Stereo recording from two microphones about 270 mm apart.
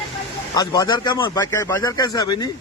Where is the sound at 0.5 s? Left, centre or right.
Centre.